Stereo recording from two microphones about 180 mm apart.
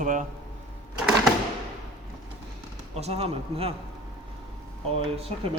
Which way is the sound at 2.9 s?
35° right (ahead or behind).